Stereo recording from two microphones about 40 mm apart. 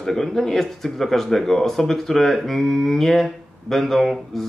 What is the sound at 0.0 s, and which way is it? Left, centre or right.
Speech, centre.